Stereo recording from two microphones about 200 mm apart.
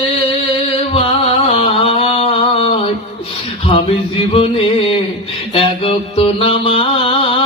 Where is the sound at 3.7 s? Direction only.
25° left (ahead or behind).